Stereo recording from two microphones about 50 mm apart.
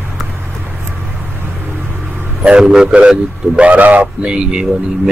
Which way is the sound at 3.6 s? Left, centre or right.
Right.